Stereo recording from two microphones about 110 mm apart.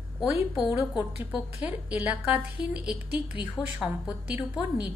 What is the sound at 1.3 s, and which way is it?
A woman's voice, 15° right (ahead or behind).